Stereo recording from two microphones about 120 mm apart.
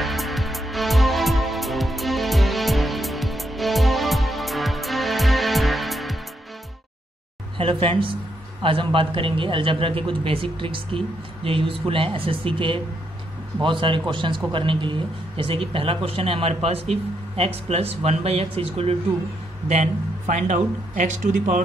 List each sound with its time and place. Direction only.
0.0 s music: centre (ahead or behind)
7.5 s a man's voice: 50° right (ahead or behind)
19.7 s speech: 85° right